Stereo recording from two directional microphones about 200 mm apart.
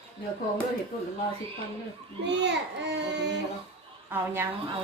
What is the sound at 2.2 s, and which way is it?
A child's voice, 60° right (ahead or behind).